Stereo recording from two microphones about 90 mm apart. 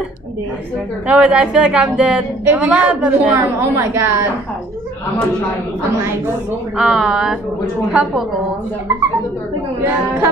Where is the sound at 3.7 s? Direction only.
30° right (ahead or behind).